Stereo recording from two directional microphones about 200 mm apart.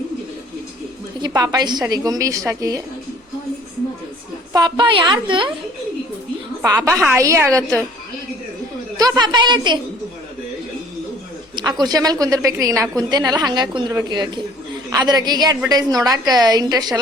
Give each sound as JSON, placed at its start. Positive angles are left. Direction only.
{"t": 1.2, "sound": "a woman's voice", "side_deg": -20}
{"t": 4.5, "sound": "a woman's voice", "side_deg": -20}
{"t": 6.6, "sound": "a woman's voice", "side_deg": -15}
{"t": 9.0, "sound": "a woman's voice", "side_deg": -20}
{"t": 11.5, "sound": "a woman's voice", "side_deg": -20}